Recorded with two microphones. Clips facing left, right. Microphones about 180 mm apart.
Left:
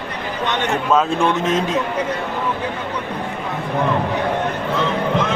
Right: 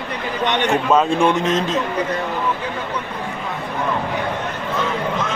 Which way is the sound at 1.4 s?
10° left (ahead or behind).